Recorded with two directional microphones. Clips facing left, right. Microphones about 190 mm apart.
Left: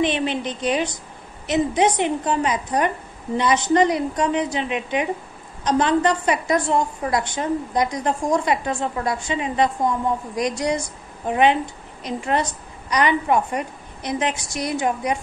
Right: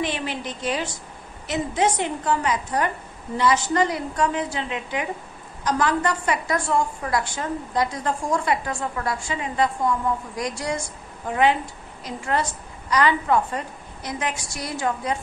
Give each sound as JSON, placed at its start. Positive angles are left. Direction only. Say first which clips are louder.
{"t": 0.0, "sound": "a woman's voice", "louder": "left 6 dB", "side_deg": 20}